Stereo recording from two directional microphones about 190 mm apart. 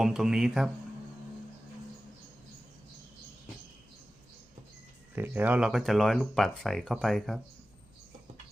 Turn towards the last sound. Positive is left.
turn(degrees=0)  # may be behind; listen again after turning